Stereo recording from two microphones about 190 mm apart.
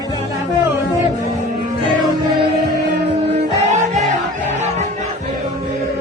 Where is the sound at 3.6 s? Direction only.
35° right (ahead or behind).